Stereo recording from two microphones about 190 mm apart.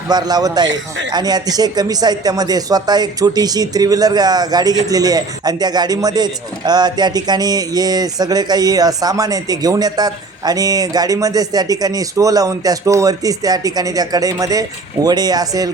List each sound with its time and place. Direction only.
0.1 s speech: 20° right (ahead or behind)